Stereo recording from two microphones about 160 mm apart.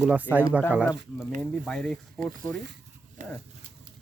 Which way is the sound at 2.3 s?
90° right.